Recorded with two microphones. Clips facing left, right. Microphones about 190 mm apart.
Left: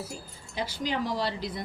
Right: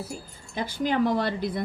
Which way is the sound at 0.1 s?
55° right (ahead or behind).